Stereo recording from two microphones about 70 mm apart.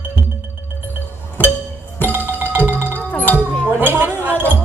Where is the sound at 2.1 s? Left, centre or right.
Right.